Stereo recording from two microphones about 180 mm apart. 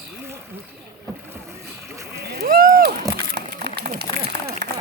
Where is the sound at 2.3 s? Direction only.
55° right (ahead or behind).